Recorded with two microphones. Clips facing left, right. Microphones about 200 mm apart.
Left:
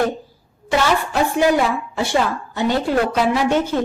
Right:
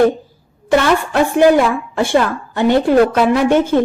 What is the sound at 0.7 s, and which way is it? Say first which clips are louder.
A woman's voice: right 5 dB; 55° right (ahead or behind).